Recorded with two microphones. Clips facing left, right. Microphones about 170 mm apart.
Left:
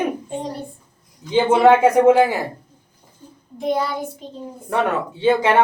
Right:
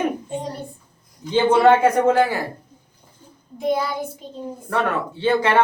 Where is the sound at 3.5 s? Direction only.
5° right (ahead or behind).